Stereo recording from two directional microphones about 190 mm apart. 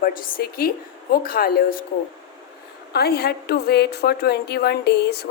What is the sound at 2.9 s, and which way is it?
A woman's voice, 55° left (ahead or behind).